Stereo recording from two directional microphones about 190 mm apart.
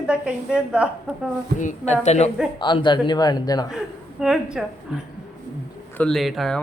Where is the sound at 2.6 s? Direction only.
25° left (ahead or behind).